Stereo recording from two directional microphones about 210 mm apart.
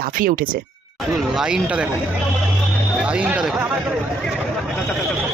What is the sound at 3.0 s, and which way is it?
Speech, 5° right (ahead or behind).